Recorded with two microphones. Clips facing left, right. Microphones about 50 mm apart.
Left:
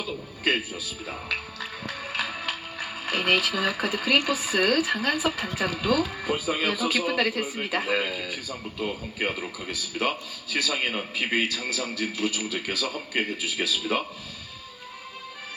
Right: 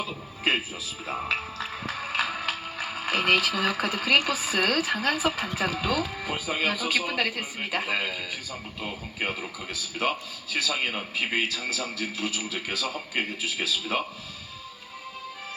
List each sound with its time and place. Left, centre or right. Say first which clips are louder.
0.4 s speech: even; right
1.9 s a man's voice: right 2 dB; centre
8.3 s speech: left 2 dB; centre
8.9 s a man's voice: even; centre